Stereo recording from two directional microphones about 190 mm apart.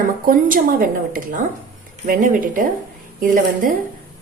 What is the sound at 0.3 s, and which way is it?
Speech, 50° right (ahead or behind).